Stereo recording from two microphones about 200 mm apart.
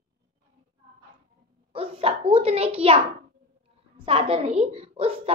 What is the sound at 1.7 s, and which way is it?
A child's voice, 25° right (ahead or behind).